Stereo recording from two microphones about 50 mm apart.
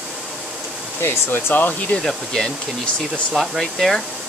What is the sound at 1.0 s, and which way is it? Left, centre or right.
Speech, left.